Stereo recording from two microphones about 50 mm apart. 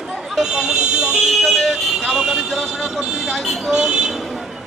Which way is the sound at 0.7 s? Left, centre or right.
Centre.